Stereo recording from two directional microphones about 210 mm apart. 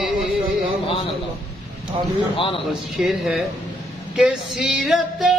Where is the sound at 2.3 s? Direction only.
25° left (ahead or behind).